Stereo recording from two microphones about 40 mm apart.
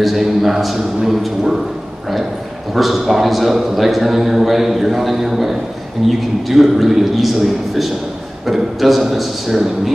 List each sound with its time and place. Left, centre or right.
0.0 s a man's voice: centre
2.7 s a man's voice: centre